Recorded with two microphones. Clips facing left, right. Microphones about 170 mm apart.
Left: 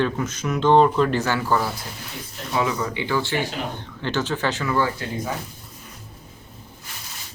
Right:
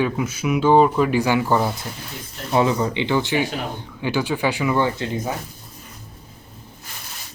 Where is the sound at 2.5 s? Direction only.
30° right (ahead or behind).